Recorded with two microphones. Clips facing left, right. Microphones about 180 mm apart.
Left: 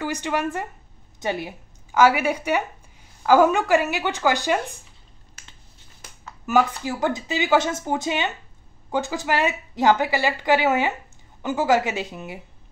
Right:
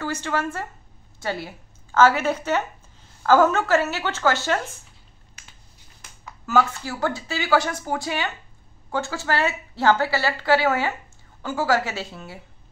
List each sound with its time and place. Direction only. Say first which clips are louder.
0.0 s a woman's voice: left 1 dB; 15° left (ahead or behind)
6.4 s a woman's voice: left 1 dB; 15° left (ahead or behind)